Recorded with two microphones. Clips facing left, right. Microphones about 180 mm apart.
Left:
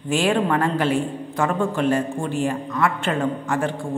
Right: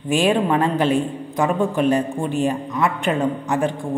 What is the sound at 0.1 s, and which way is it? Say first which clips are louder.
A man's voice: right 2 dB; 20° right (ahead or behind).